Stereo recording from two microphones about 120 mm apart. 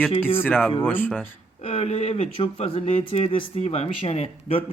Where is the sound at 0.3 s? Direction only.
15° left (ahead or behind).